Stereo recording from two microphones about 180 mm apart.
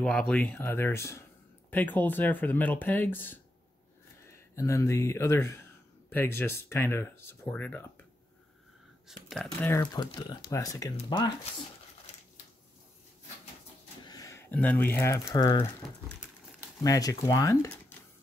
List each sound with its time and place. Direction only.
0.0 s speech: 5° left (ahead or behind)
9.0 s speech: centre (ahead or behind)
9.6 s speech: 15° left (ahead or behind)
14.0 s speech: 20° left (ahead or behind)
16.8 s speech: 20° left (ahead or behind)